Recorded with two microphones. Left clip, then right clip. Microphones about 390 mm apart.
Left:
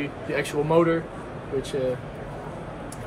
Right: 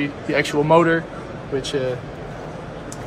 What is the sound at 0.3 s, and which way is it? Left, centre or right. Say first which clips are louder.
Speech: right 7 dB; right.